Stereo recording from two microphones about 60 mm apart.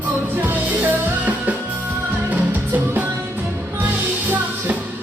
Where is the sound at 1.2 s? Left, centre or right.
Right.